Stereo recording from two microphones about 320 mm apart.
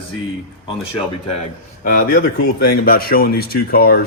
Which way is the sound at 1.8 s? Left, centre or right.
Left.